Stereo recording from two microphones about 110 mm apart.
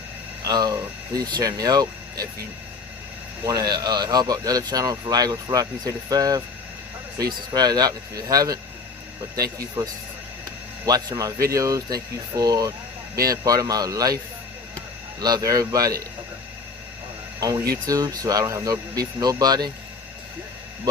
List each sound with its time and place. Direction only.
0.4 s speech: 40° right (ahead or behind)
3.4 s speech: 35° right (ahead or behind)
15.2 s speech: 35° right (ahead or behind)
17.4 s speech: 35° right (ahead or behind)